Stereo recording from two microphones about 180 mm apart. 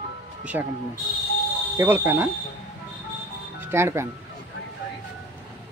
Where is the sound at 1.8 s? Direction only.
15° right (ahead or behind).